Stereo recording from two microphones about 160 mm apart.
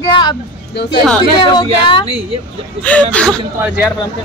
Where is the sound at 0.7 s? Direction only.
85° left.